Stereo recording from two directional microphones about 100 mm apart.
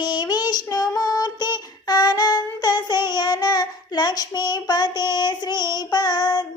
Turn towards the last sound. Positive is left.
turn(degrees=45)  # may be behind; listen again after turning